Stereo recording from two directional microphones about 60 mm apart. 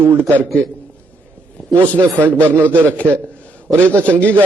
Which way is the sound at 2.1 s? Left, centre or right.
Right.